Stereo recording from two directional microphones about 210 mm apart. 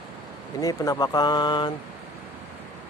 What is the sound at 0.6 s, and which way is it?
Speech, 20° left (ahead or behind).